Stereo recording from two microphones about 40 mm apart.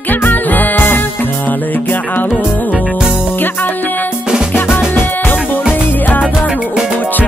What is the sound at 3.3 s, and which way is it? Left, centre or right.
Music, left.